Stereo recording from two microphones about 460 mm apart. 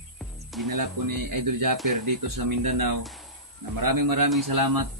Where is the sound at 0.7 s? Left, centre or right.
Right.